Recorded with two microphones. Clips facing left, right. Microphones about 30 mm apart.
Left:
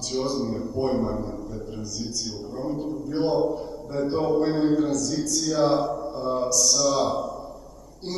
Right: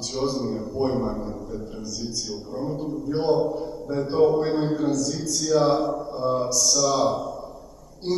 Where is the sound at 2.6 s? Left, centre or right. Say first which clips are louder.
Even; centre.